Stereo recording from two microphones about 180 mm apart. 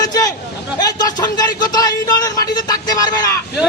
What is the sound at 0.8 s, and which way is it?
Speech, 20° left (ahead or behind).